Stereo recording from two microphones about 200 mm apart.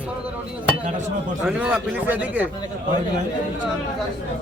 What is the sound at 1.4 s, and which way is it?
A man's voice, 5° right (ahead or behind).